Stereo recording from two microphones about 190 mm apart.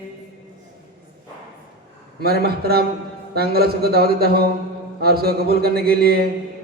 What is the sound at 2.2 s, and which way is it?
A man's voice, 55° right (ahead or behind).